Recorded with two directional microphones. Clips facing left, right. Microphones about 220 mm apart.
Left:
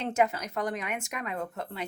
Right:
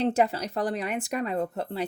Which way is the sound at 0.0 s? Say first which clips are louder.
Right 3 dB; 35° right (ahead or behind).